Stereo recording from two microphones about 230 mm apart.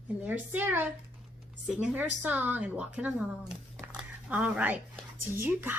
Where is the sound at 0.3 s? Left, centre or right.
Centre.